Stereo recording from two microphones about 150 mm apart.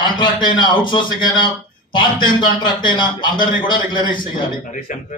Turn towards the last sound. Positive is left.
turn(degrees=60)  # may be behind; listen again after turning